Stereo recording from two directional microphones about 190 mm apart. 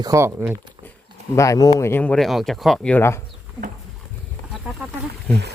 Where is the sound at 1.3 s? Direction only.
15° left (ahead or behind).